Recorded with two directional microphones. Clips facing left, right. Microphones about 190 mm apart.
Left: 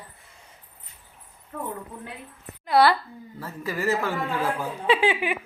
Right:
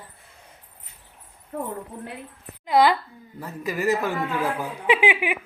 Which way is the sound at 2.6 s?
15° right (ahead or behind).